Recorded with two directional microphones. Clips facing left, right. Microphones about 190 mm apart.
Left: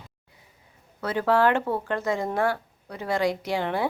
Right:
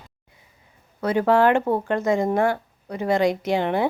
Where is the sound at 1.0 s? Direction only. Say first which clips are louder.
Right 4 dB; 15° right (ahead or behind).